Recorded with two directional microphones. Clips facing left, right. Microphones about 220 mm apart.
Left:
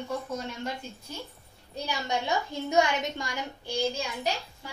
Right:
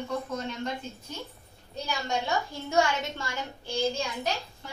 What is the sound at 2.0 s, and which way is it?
A woman's voice, 20° left (ahead or behind).